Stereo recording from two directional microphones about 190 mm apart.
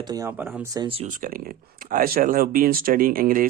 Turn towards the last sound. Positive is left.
turn(degrees=-45)  # may be behind; listen again after turning